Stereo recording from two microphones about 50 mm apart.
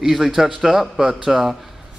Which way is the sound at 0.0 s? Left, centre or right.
Centre.